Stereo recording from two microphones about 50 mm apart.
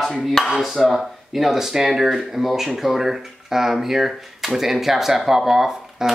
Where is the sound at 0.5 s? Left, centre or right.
Centre.